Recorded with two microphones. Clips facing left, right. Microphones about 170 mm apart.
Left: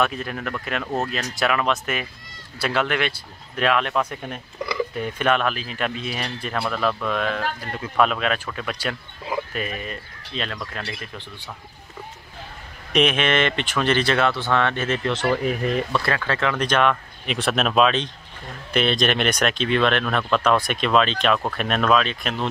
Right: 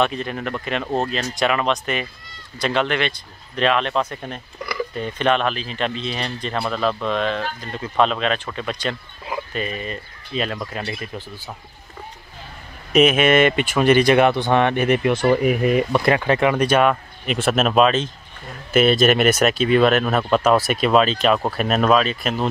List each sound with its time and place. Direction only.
0.0 s speech: 5° left (ahead or behind)
4.9 s speech: 5° left (ahead or behind)
6.6 s speech: 20° right (ahead or behind)
7.2 s speech: 5° left (ahead or behind)
12.9 s speech: 5° right (ahead or behind)